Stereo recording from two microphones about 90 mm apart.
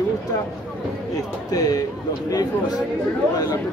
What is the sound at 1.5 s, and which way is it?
Speech, 45° left (ahead or behind).